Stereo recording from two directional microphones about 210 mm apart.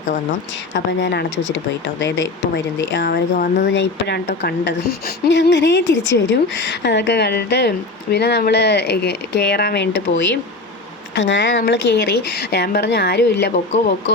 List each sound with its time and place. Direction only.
0.7 s speech: 55° left (ahead or behind)
11.1 s speech: 55° left (ahead or behind)